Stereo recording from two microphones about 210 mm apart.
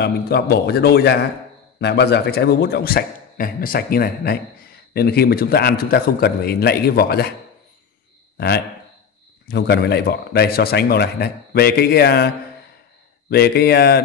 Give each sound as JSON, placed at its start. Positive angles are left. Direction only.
{"t": 0.0, "sound": "a man's voice", "side_deg": 50}
{"t": 9.5, "sound": "a man's voice", "side_deg": 50}
{"t": 13.3, "sound": "a man's voice", "side_deg": 50}